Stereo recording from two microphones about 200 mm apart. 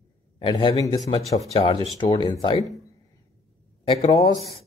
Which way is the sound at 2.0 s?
20° left (ahead or behind).